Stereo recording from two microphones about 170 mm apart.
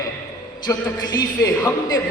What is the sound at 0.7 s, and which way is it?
Speech, 15° left (ahead or behind).